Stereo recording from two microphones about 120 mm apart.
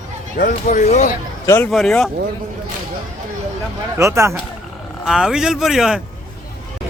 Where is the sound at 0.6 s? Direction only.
90° left.